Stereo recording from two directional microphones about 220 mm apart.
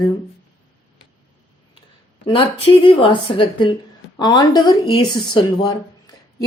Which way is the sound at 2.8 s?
25° left (ahead or behind).